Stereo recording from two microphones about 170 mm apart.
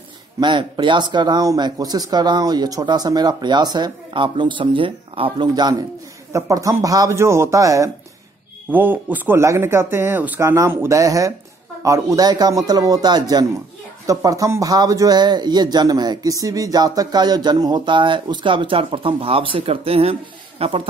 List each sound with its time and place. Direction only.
0.4 s a man's voice: 25° right (ahead or behind)